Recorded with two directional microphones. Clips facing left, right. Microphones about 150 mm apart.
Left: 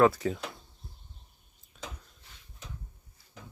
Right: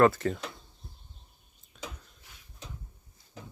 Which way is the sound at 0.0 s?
Centre (ahead or behind).